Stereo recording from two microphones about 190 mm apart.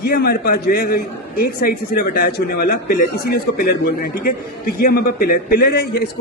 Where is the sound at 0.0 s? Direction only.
55° left (ahead or behind).